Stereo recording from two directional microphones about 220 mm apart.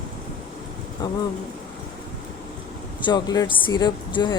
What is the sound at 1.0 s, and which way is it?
Speech, 20° left (ahead or behind).